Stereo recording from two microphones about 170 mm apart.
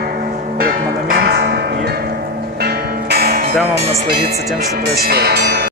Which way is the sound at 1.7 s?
70° right (ahead or behind).